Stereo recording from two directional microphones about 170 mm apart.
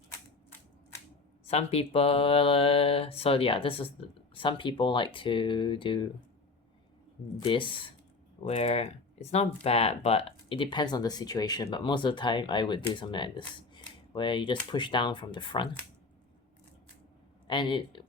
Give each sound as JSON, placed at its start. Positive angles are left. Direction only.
{"t": 1.5, "sound": "mantra", "side_deg": 35}
{"t": 7.3, "sound": "speech", "side_deg": 30}
{"t": 17.5, "sound": "speech", "side_deg": 30}